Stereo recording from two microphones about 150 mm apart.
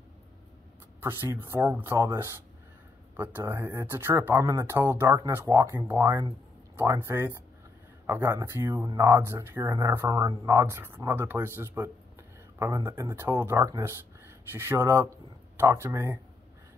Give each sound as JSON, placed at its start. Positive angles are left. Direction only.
{"t": 1.0, "sound": "speech", "side_deg": -15}
{"t": 3.2, "sound": "speech", "side_deg": -15}